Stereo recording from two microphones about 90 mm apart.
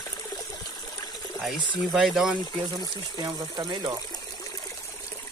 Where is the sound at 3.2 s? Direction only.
50° right (ahead or behind).